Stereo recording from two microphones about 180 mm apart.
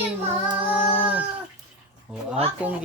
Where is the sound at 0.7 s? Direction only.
10° right (ahead or behind).